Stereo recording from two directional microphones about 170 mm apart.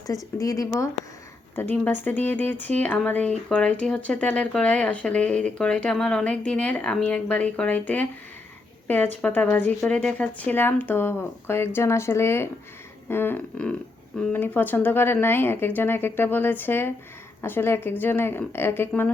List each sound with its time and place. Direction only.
0.3 s speech: 20° left (ahead or behind)